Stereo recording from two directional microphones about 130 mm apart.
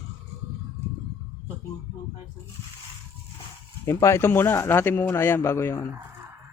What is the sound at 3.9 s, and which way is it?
Speech, 20° left (ahead or behind).